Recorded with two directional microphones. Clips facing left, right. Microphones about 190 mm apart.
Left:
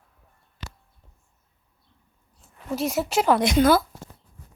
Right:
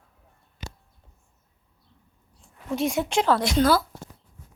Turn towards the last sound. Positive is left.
turn(degrees=20)  # may be behind; listen again after turning